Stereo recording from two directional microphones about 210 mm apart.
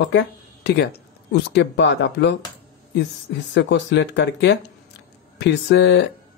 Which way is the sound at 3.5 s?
60° left (ahead or behind).